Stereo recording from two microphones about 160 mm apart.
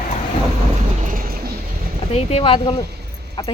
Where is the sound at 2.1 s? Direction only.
40° left (ahead or behind).